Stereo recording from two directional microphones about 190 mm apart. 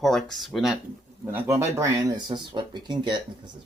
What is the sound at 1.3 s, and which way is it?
Speech, 10° right (ahead or behind).